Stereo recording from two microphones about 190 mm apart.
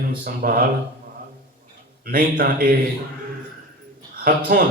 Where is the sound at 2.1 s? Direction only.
50° right (ahead or behind).